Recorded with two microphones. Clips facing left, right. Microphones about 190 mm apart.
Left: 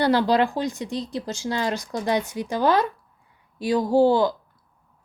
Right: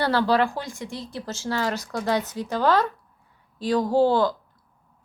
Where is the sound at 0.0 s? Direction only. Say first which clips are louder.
Left 2 dB; 15° left (ahead or behind).